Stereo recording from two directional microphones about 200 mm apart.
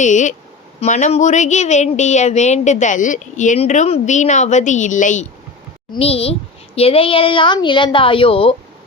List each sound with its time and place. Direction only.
0.0 s a woman's voice: 35° left (ahead or behind)